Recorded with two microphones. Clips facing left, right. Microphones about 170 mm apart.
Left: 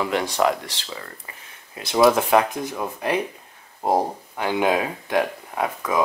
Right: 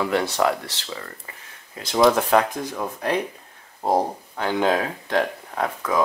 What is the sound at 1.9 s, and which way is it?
Speech, 10° left (ahead or behind).